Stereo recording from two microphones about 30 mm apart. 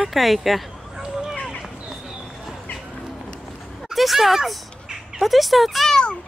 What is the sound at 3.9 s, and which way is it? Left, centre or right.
Speech, centre.